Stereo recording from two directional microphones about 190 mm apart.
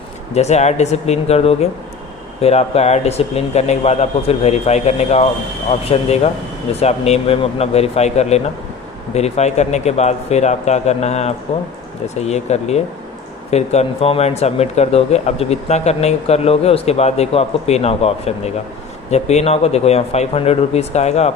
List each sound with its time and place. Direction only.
0.3 s speech: 35° left (ahead or behind)